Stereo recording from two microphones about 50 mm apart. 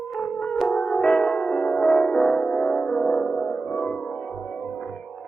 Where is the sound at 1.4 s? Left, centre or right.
Centre.